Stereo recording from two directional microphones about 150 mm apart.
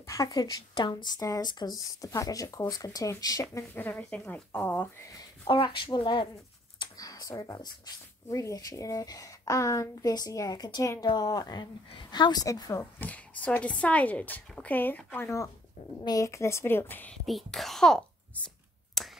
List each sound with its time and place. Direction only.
0.0 s a woman's voice: 20° left (ahead or behind)
3.7 s speech: 10° left (ahead or behind)
5.5 s speech: 35° left (ahead or behind)
6.8 s a sound: 25° left (ahead or behind)
8.3 s a woman's voice: 20° left (ahead or behind)
13.0 s a woman's voice: 10° left (ahead or behind)
17.3 s a child's voice: centre (ahead or behind)
19.0 s a sound: centre (ahead or behind)